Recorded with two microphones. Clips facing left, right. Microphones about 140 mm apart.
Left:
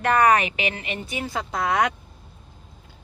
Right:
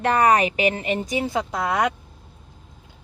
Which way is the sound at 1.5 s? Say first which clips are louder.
Left 3 dB; 10° right (ahead or behind).